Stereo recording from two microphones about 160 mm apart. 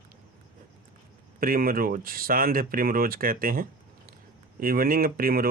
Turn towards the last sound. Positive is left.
turn(degrees=-65)  # may be behind; listen again after turning